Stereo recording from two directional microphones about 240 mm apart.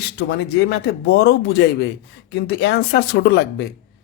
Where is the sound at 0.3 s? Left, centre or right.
Left.